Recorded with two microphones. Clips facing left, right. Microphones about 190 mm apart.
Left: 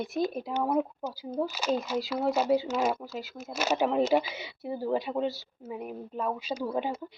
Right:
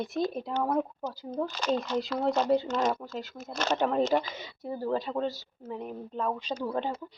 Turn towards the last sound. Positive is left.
turn(degrees=10)  # may be behind; listen again after turning